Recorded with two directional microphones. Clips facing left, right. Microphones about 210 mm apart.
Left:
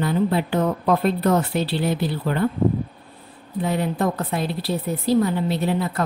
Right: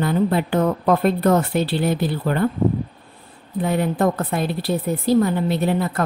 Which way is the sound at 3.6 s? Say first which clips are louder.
Right 3 dB; 50° right (ahead or behind).